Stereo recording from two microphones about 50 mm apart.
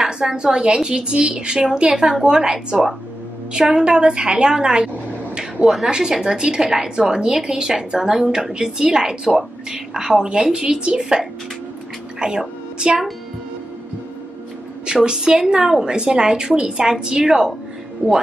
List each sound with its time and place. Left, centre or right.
0.0 s a woman's voice: centre
14.9 s a woman's voice: centre
18.0 s speech: right